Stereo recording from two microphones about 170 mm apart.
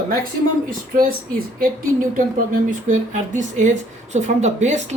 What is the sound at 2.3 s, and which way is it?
Speech, 50° right (ahead or behind).